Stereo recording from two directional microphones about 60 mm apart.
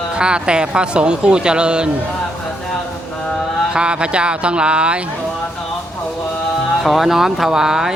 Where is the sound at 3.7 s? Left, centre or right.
Centre.